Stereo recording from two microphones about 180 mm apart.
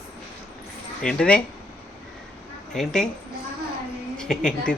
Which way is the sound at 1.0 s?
5° left (ahead or behind).